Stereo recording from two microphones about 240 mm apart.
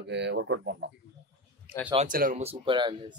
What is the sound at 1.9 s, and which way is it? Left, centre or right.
Speech, right.